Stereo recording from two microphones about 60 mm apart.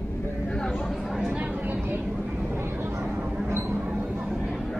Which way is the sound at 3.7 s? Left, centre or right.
Centre.